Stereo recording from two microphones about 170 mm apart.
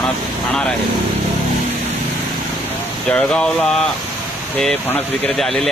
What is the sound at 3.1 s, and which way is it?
Speech, 5° left (ahead or behind).